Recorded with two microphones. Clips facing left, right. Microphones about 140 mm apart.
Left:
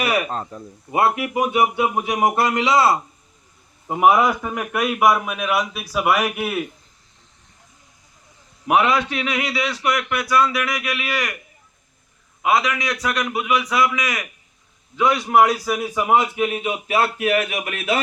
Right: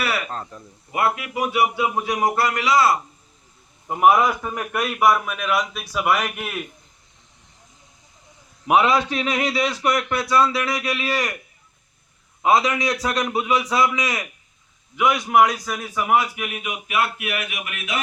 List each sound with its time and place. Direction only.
0.0 s speech: 20° left (ahead or behind)
3.8 s a man's voice: 10° left (ahead or behind)
8.6 s a man's voice: 30° right (ahead or behind)
12.4 s a man's voice: 30° right (ahead or behind)
15.3 s speech: 5° left (ahead or behind); by 18.0 s 35° left (ahead or behind)